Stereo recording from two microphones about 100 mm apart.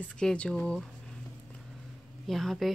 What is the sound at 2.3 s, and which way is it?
Speech, centre (ahead or behind).